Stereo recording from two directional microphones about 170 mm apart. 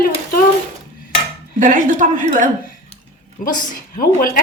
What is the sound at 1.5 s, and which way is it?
Speech, 50° right (ahead or behind).